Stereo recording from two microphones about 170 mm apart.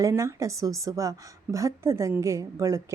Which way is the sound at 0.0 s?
15° right (ahead or behind).